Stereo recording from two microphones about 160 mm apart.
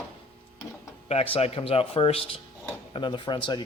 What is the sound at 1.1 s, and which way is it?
Speech, 40° left (ahead or behind).